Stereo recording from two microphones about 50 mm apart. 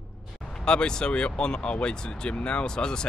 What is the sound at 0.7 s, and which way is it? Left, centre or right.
Speech, centre.